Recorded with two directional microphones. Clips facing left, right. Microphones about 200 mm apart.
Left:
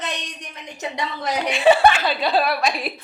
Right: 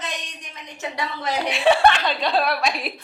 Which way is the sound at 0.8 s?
20° left (ahead or behind).